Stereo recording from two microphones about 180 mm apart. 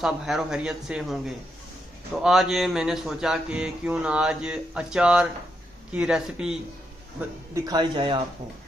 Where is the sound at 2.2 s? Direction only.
Centre (ahead or behind).